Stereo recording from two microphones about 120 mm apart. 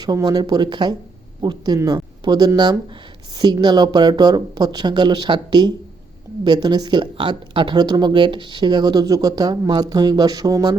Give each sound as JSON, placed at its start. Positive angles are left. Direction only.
{"t": 0.0, "sound": "speech", "side_deg": -35}